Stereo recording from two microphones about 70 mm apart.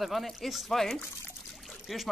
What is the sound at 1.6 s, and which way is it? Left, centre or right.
Pour, centre.